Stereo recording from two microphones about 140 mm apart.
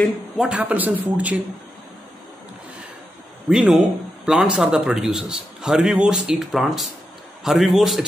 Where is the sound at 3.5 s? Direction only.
5° right (ahead or behind).